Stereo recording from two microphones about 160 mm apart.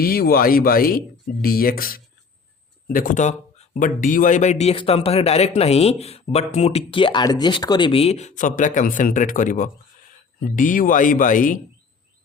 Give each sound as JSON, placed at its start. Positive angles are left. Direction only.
{"t": 0.0, "sound": "a man's voice", "side_deg": 70}